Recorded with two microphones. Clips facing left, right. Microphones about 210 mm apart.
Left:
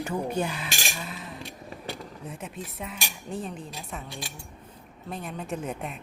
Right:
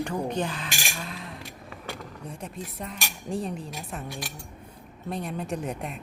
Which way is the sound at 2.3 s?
Centre (ahead or behind).